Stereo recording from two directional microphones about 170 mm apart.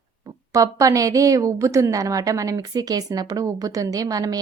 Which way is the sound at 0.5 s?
20° right (ahead or behind).